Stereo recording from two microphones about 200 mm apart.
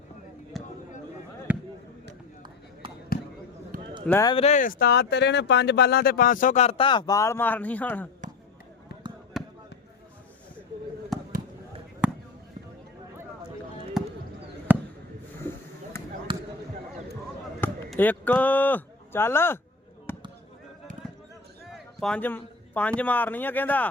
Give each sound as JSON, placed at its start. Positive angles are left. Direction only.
{"t": 0.5, "sound": "a sound", "side_deg": 0}
{"t": 1.5, "sound": "basketball bounce", "side_deg": -5}
{"t": 3.1, "sound": "basketball bounce", "side_deg": 50}
{"t": 4.0, "sound": "speech", "side_deg": 10}
{"t": 4.3, "sound": "speech", "side_deg": 30}
{"t": 8.2, "sound": "basketball bounce", "side_deg": -40}
{"t": 9.4, "sound": "basketball bounce", "side_deg": 0}
{"t": 11.1, "sound": "fireworks", "side_deg": 0}
{"t": 14.7, "sound": "basketball bounce", "side_deg": -10}
{"t": 15.4, "sound": "a sound", "side_deg": 10}
{"t": 16.3, "sound": "basketball bounce", "side_deg": -25}
{"t": 17.6, "sound": "speech", "side_deg": 10}
{"t": 20.1, "sound": "basketball bounce", "side_deg": 10}
{"t": 21.7, "sound": "a man's voice", "side_deg": 5}